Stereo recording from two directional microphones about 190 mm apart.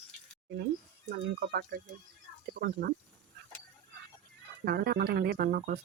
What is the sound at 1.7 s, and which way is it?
Speech, 65° right (ahead or behind).